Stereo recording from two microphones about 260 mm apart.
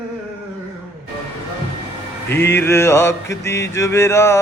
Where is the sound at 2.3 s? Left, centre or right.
Centre.